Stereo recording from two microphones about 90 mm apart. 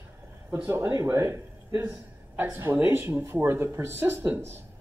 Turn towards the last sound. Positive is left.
turn(degrees=-25)  # may be behind; listen again after turning